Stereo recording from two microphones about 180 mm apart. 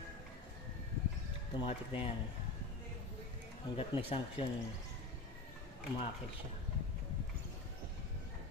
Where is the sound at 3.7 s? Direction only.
30° left (ahead or behind).